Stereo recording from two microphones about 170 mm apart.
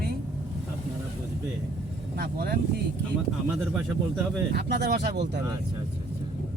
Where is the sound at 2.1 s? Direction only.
65° right (ahead or behind).